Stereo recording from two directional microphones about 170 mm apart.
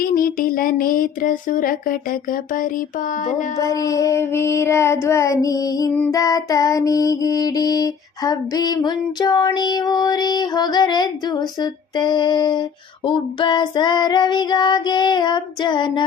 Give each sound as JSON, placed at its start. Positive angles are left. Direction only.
{"t": 0.0, "sound": "a sound", "side_deg": 55}
{"t": 3.6, "sound": "child singing", "side_deg": 20}
{"t": 6.1, "sound": "music", "side_deg": 20}